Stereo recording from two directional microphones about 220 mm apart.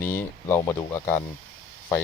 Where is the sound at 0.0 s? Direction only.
10° left (ahead or behind).